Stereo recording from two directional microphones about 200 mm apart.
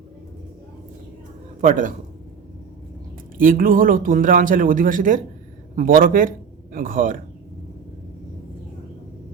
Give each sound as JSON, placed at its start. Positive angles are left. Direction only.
{"t": 1.6, "sound": "a man's voice", "side_deg": -40}
{"t": 3.3, "sound": "speech", "side_deg": -45}